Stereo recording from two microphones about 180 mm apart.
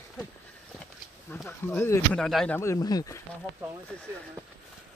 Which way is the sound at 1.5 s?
15° left (ahead or behind).